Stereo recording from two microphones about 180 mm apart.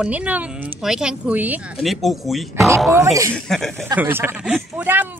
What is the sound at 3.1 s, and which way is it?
Speech, 20° right (ahead or behind).